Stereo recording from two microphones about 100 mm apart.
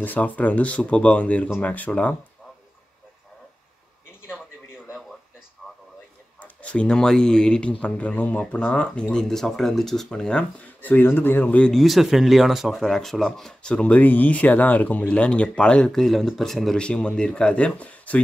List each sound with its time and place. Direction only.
0.0 s speech: 15° left (ahead or behind)
6.4 s speech: 15° left (ahead or behind)
10.8 s speech: 20° left (ahead or behind)
11.7 s speech: centre (ahead or behind)